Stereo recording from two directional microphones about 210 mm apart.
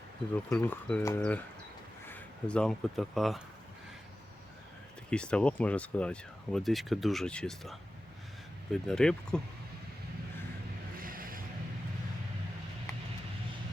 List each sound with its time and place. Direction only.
0.5 s speech: 5° left (ahead or behind)
5.1 s speech: 5° left (ahead or behind)
11.0 s a sound: 40° right (ahead or behind)